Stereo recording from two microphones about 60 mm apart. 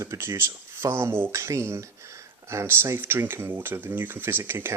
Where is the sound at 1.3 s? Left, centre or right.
Right.